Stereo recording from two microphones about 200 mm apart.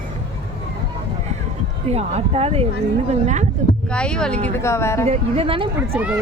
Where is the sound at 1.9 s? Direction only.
30° right (ahead or behind).